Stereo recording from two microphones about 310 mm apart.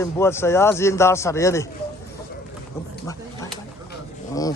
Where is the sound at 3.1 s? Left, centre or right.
Centre.